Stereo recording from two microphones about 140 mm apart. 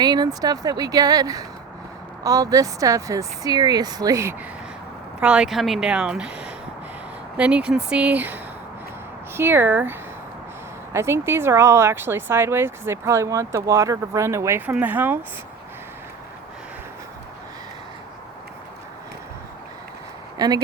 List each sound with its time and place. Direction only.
0.0 s speech: 30° right (ahead or behind)
5.2 s speech: 5° right (ahead or behind)
20.4 s speech: 30° right (ahead or behind)